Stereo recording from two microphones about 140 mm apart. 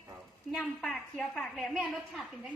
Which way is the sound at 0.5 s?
Centre (ahead or behind).